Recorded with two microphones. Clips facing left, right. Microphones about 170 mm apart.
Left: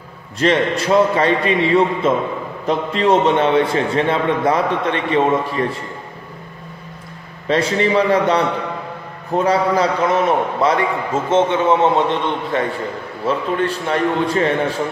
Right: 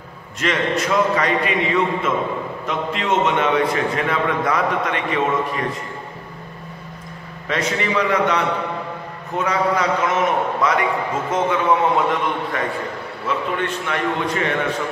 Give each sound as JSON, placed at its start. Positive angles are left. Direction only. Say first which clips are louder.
{"t": 0.4, "sound": "a man's voice", "louder": "left 4 dB", "side_deg": 30}
{"t": 7.4, "sound": "a man's voice", "louder": "left 6 dB", "side_deg": 30}